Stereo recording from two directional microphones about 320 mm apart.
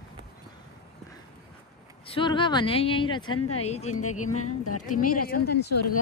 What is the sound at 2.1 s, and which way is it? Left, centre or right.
A woman's voice, centre.